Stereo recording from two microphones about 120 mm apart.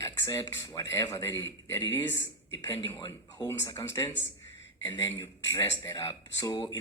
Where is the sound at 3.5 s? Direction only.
25° left (ahead or behind).